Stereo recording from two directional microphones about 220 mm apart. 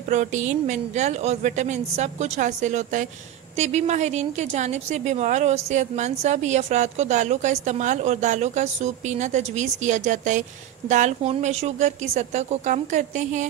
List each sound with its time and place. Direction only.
0.1 s a woman's voice: 35° right (ahead or behind)